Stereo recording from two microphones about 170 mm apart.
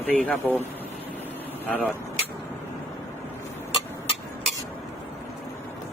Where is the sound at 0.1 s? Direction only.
10° left (ahead or behind).